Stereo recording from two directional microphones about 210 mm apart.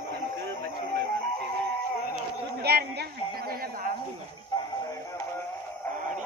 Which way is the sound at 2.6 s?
50° right (ahead or behind).